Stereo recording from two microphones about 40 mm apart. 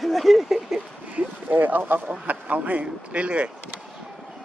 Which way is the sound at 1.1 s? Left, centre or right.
Right.